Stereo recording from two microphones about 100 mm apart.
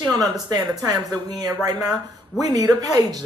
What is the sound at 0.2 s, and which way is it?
Speech, 40° right (ahead or behind).